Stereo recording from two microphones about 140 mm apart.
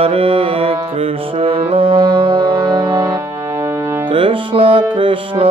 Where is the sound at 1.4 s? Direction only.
40° right (ahead or behind).